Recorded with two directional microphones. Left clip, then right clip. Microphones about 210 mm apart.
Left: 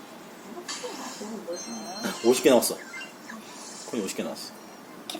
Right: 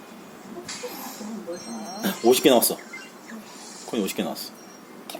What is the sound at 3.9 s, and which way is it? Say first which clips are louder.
Speech: right 4 dB; 40° right (ahead or behind).